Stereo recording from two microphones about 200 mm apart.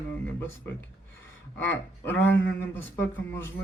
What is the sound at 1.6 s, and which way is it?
Speech, 10° left (ahead or behind).